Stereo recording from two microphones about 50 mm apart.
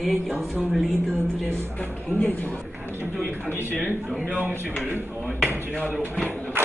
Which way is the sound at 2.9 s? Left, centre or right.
Right.